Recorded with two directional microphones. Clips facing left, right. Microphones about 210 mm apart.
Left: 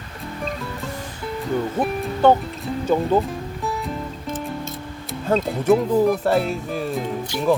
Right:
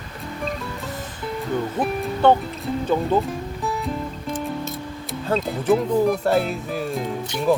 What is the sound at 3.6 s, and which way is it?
Music, centre (ahead or behind).